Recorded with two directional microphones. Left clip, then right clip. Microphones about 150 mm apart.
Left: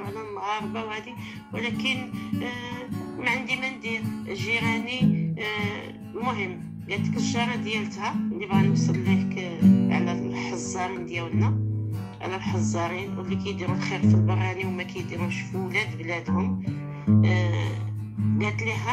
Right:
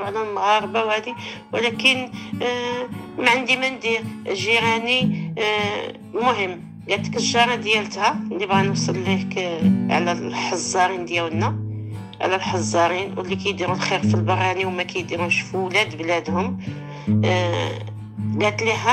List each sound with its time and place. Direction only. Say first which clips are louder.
0.0 s speech: right 11 dB; 45° right (ahead or behind)
1.5 s music: right 10 dB; 45° right (ahead or behind)